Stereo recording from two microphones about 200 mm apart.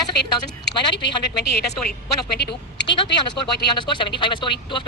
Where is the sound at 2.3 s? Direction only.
55° left (ahead or behind).